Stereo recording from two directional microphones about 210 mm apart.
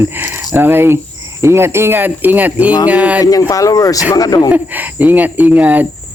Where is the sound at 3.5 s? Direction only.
15° left (ahead or behind).